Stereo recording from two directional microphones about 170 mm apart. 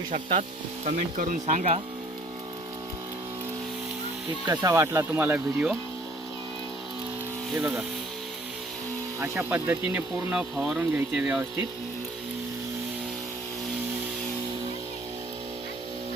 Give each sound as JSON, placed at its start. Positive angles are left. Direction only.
{"t": 0.9, "sound": "speech", "side_deg": -45}
{"t": 4.4, "sound": "speech", "side_deg": -20}
{"t": 7.5, "sound": "speech", "side_deg": -10}
{"t": 9.2, "sound": "speech", "side_deg": -15}